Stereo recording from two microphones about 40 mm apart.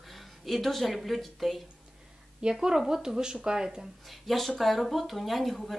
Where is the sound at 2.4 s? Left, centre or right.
Right.